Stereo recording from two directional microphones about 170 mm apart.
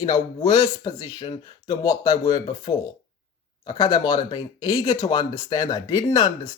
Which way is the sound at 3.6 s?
25° left (ahead or behind).